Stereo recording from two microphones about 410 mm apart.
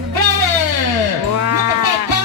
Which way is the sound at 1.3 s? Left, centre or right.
Right.